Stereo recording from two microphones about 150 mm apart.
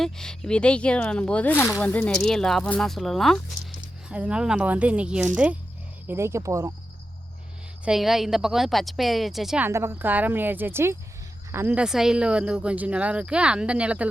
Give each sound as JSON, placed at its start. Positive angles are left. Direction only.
{"t": 0.0, "sound": "speech", "side_deg": 5}
{"t": 7.9, "sound": "speech", "side_deg": 0}
{"t": 9.6, "sound": "speech", "side_deg": -15}